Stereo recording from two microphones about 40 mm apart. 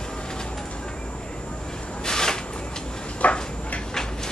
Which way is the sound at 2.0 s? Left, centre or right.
Centre.